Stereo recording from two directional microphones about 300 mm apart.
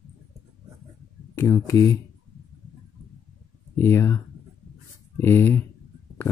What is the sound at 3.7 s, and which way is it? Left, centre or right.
Speech, centre.